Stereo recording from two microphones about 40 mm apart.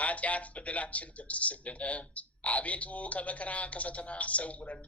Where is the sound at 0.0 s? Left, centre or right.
Left.